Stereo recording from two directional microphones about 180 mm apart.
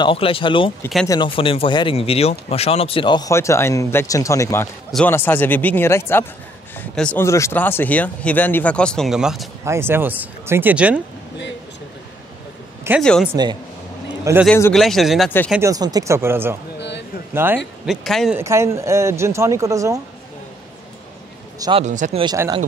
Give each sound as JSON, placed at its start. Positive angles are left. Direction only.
{"t": 0.0, "sound": "speech", "side_deg": 30}
{"t": 9.7, "sound": "speech", "side_deg": -15}
{"t": 13.0, "sound": "speech", "side_deg": 5}
{"t": 13.3, "sound": "speech", "side_deg": -25}
{"t": 14.7, "sound": "speech", "side_deg": 0}
{"t": 15.6, "sound": "speech", "side_deg": -20}
{"t": 17.8, "sound": "speech", "side_deg": 0}
{"t": 18.3, "sound": "speech", "side_deg": -15}
{"t": 21.5, "sound": "a man's voice", "side_deg": -20}
{"t": 21.8, "sound": "speech", "side_deg": -40}
{"t": 22.2, "sound": "speech", "side_deg": -20}